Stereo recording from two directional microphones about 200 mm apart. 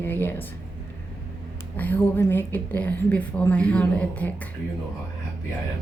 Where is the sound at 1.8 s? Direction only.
10° left (ahead or behind).